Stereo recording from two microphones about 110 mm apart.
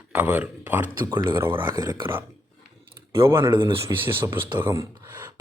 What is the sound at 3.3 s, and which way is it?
A man's voice, 25° right (ahead or behind).